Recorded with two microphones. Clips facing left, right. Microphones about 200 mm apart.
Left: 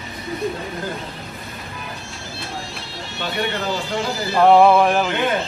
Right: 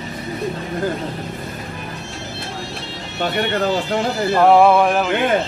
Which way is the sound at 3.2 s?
55° right (ahead or behind).